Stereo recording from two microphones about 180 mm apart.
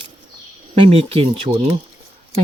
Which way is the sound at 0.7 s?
30° right (ahead or behind).